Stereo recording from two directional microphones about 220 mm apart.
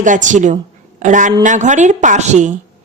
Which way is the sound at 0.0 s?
35° right (ahead or behind).